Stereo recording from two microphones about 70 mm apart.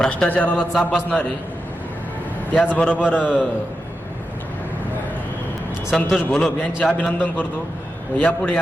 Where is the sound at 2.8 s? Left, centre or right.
Centre.